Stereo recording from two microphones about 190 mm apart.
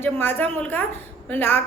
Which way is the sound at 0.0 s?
10° left (ahead or behind).